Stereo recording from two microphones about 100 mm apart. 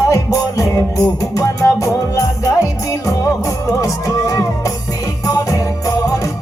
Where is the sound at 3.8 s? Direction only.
35° left (ahead or behind).